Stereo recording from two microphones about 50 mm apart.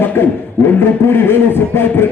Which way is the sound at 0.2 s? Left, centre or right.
Left.